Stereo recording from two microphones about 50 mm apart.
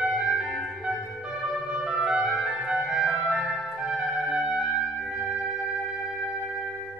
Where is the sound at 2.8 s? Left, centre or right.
Centre.